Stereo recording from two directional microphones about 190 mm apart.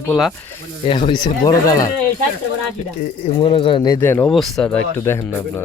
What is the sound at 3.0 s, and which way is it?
Speech, 30° left (ahead or behind).